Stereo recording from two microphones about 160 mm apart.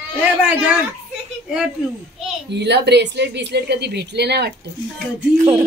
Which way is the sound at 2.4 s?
90° right.